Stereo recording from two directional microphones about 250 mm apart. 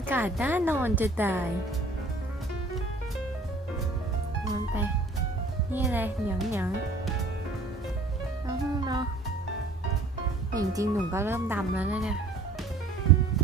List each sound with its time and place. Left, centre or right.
0.1 s speech: centre
5.7 s speech: centre
8.4 s music: centre
10.5 s speech: centre